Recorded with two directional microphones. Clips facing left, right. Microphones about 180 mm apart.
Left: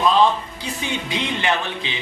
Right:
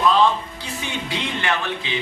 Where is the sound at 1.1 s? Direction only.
20° left (ahead or behind).